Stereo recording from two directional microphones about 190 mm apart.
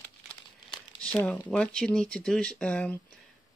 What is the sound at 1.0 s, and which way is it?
Speech, 10° left (ahead or behind).